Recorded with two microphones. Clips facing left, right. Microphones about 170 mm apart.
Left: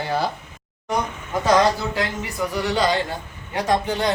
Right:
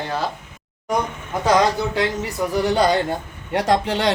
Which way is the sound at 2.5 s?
45° right (ahead or behind).